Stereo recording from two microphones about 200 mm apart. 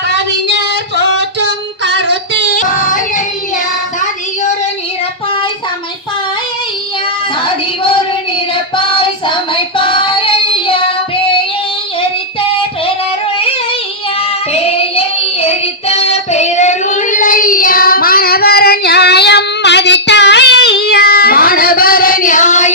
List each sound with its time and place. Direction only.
2.5 s child singing: 40° left (ahead or behind)
8.7 s child singing: 25° left (ahead or behind)
14.7 s child singing: 30° left (ahead or behind)